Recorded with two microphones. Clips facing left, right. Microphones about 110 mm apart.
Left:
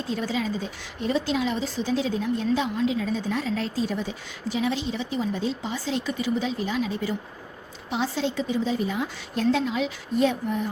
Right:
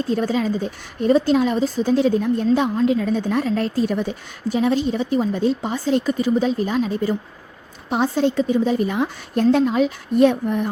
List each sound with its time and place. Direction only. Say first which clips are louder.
0.1 s a woman's voice: right 6 dB; 45° right (ahead or behind)